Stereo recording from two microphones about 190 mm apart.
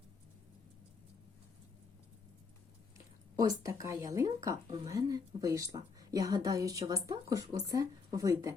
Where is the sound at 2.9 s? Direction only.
20° right (ahead or behind).